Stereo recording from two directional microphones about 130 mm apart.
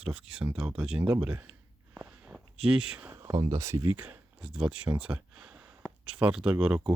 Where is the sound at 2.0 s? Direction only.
10° right (ahead or behind).